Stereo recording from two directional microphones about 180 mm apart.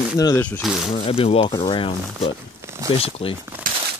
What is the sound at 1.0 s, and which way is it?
Speech, 30° left (ahead or behind).